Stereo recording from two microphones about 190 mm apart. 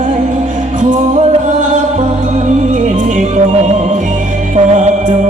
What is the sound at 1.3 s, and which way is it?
Music, 40° right (ahead or behind).